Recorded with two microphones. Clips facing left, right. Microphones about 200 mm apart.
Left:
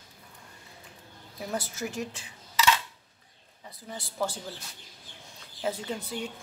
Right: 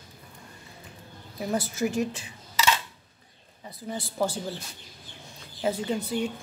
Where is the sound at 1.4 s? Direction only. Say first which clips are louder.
Right 6 dB; 5° right (ahead or behind).